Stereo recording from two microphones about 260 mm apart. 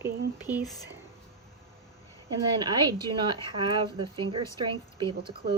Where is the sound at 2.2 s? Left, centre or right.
Centre.